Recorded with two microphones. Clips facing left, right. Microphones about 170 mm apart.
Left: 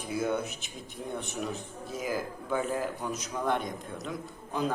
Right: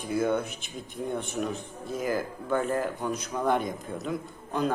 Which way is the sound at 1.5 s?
50° right (ahead or behind).